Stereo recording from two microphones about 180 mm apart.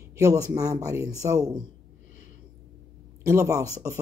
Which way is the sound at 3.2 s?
15° right (ahead or behind).